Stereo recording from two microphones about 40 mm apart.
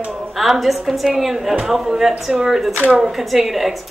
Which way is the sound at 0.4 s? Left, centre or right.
Centre.